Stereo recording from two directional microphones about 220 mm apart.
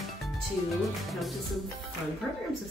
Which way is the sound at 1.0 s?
Centre (ahead or behind).